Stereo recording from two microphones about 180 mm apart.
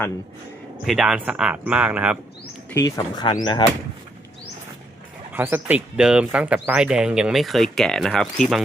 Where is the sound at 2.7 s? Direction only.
20° left (ahead or behind).